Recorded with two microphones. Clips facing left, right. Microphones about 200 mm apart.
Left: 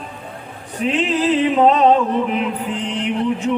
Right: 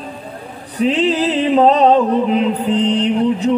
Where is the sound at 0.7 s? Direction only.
35° right (ahead or behind).